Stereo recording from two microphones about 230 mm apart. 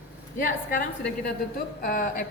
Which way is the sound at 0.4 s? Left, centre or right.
Left.